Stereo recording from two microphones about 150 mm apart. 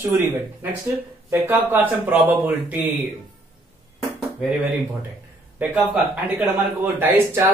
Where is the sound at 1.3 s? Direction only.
15° right (ahead or behind).